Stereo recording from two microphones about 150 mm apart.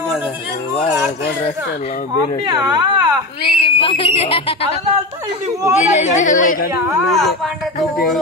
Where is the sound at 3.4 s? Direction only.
35° left (ahead or behind).